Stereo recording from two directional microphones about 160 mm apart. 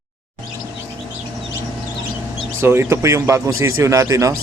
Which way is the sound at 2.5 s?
15° right (ahead or behind).